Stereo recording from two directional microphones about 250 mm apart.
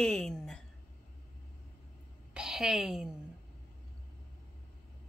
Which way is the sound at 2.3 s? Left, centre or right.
Centre.